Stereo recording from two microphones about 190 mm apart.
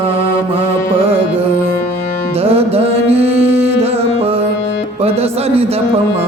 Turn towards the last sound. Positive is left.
turn(degrees=-30)  # may be behind; listen again after turning